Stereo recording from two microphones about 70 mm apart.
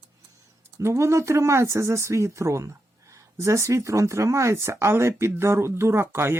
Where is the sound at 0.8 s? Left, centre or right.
Right.